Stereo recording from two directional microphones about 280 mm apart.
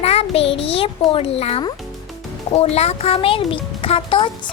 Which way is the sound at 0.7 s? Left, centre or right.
Centre.